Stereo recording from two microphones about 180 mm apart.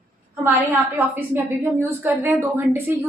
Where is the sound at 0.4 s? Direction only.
10° right (ahead or behind).